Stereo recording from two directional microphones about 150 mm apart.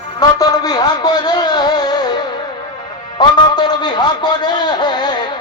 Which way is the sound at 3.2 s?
30° left (ahead or behind).